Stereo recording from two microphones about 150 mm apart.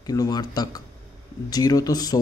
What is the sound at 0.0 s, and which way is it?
A man's voice, 25° left (ahead or behind).